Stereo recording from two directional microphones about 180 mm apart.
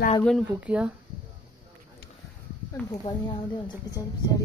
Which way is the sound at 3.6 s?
20° left (ahead or behind).